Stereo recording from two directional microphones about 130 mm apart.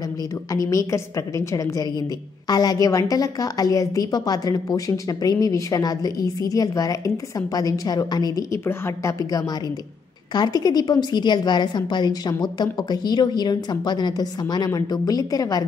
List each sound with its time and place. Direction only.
0.5 s a woman's voice: 25° left (ahead or behind)